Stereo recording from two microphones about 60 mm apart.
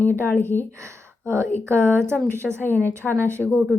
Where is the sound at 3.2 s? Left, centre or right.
Right.